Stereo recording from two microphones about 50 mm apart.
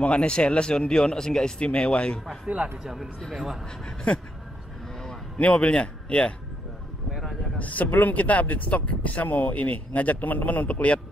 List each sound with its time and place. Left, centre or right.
0.0 s speech: left
2.4 s speech: right
2.8 s speech: centre
3.2 s a man's voice: centre
3.8 s speech: left
5.4 s speech: left
7.5 s speech: left